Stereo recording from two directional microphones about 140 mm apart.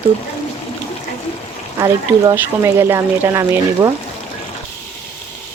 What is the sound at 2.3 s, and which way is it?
Speech, 15° right (ahead or behind).